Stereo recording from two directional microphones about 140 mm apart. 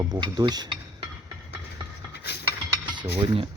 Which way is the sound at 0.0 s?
30° right (ahead or behind).